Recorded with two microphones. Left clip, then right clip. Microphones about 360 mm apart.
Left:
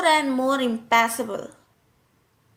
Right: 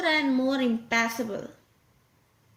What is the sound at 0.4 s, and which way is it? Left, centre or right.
Speech, centre.